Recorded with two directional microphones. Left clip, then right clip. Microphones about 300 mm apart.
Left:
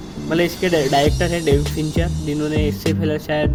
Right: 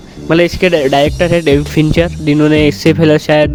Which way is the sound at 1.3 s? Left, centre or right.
Right.